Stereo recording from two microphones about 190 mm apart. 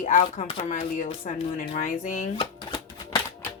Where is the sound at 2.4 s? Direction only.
25° left (ahead or behind).